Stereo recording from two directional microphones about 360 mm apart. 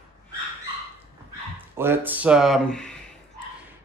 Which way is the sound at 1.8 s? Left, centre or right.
Centre.